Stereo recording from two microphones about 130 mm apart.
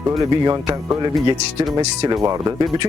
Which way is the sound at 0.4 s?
30° right (ahead or behind).